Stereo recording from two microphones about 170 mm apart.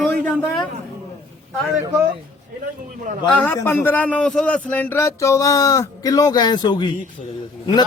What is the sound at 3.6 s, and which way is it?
Speech, 10° left (ahead or behind).